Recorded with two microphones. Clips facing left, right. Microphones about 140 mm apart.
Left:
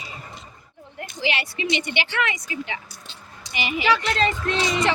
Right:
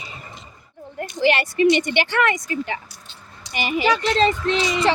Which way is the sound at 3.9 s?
25° right (ahead or behind).